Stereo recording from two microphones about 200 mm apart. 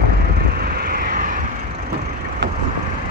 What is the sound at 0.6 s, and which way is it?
Vehicle, 50° right (ahead or behind).